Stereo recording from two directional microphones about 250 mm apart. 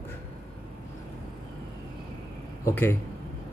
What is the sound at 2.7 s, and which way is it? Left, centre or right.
Speech, centre.